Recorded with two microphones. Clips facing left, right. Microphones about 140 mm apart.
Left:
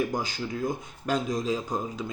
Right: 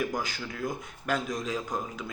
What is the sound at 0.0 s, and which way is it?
Speech, 30° left (ahead or behind).